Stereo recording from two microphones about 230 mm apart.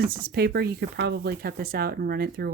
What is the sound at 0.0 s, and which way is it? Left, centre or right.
Speech, right.